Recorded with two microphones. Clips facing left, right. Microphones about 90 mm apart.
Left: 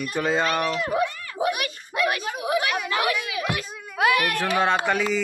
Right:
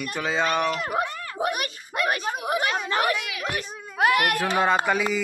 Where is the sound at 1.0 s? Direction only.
40° right (ahead or behind).